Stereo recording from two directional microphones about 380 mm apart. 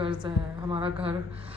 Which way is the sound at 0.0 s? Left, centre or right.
Centre.